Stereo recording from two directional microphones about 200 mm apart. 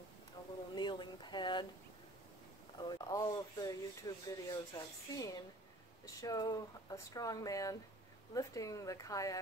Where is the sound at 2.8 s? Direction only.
20° left (ahead or behind).